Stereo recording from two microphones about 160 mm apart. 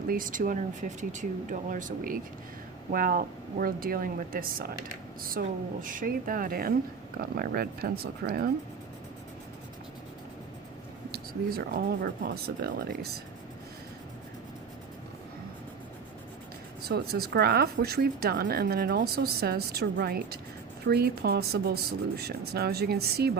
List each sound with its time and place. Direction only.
0.1 s speech: 55° right (ahead or behind)
5.4 s speech: 75° right (ahead or behind)
5.8 s speech: 55° right (ahead or behind); by 8.4 s 75° right (ahead or behind)
11.1 s speech: 70° right (ahead or behind)
16.9 s speech: 75° right (ahead or behind)